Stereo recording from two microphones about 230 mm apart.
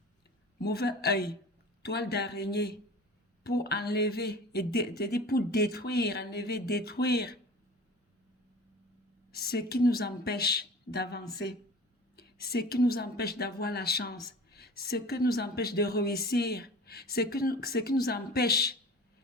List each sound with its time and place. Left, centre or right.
0.6 s speech: left
9.3 s speech: left